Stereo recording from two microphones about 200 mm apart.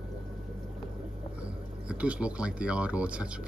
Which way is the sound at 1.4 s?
5° right (ahead or behind).